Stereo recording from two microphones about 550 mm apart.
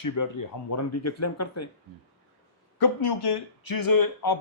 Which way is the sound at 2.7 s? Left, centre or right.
Left.